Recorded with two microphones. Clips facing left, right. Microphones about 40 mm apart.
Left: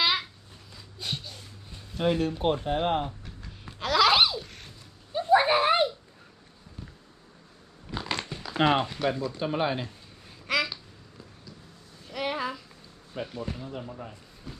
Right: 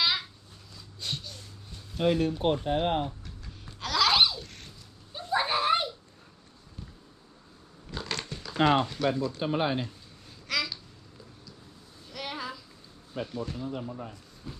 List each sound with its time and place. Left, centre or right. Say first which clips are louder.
0.7 s a sound: left 1 dB; centre
2.0 s speech: even; centre
3.2 s laughter: left 2 dB; centre
5.2 s a sound: left 6 dB; centre
6.8 s a sound: left 2 dB; centre
7.9 s crushing: left 3 dB; centre
8.5 s speech: even; left
8.8 s speech: even; centre
9.4 s speech: left 2 dB; centre
10.2 s babbling: left 4 dB; left
12.0 s a sound: left 6 dB; centre
13.1 s speech: even; centre